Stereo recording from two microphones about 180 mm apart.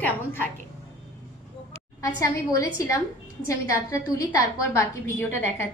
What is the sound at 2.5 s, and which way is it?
A woman's voice, 20° left (ahead or behind).